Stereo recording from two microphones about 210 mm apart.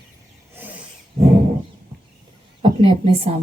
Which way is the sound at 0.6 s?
10° right (ahead or behind).